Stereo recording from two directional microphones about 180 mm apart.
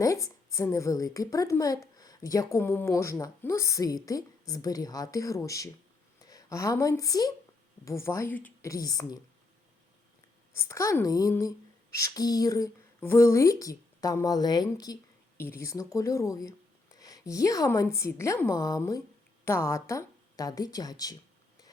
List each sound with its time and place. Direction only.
0.0 s a woman's voice: 20° left (ahead or behind)
10.5 s speech: 15° left (ahead or behind)